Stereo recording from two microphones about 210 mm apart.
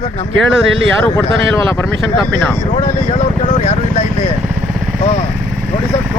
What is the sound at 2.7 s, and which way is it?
Speech, 35° left (ahead or behind).